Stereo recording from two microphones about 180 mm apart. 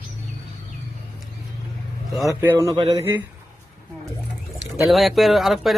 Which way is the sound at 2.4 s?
15° right (ahead or behind).